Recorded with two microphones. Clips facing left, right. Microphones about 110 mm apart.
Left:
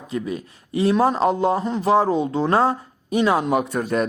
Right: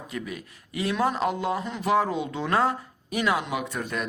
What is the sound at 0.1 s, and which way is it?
A man's voice, 30° left (ahead or behind).